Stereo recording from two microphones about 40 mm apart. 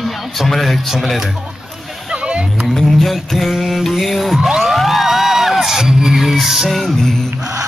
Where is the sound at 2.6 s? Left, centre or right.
Centre.